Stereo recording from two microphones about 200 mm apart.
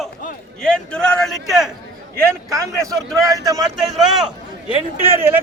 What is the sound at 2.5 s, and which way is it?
A man's voice, 15° right (ahead or behind).